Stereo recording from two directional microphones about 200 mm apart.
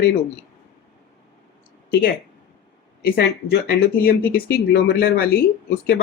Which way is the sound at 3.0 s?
50° left (ahead or behind).